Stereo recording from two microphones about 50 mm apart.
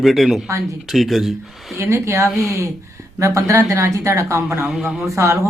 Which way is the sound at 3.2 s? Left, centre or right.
Right.